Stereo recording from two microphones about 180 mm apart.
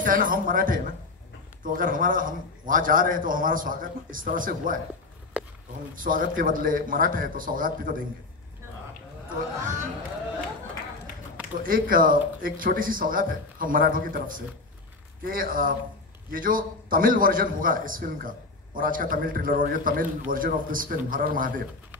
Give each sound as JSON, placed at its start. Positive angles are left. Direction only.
{"t": 0.0, "sound": "a man's voice", "side_deg": -50}
{"t": 5.4, "sound": "a sound", "side_deg": -5}
{"t": 6.0, "sound": "a man's voice", "side_deg": -50}
{"t": 11.6, "sound": "a man's voice", "side_deg": -50}